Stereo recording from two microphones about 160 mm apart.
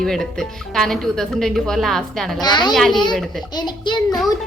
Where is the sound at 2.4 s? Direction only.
25° left (ahead or behind).